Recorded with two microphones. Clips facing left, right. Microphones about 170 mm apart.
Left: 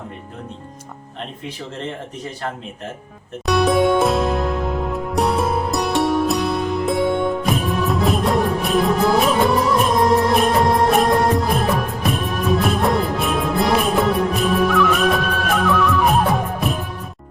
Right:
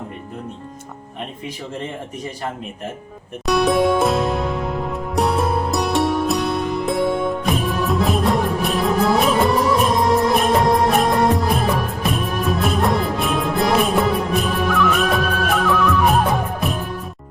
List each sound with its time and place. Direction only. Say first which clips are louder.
3.4 s music: even; centre (ahead or behind)
10.2 s music of bollywood: even; centre (ahead or behind)